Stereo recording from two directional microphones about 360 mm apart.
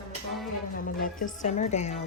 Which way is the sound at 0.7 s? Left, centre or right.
Left.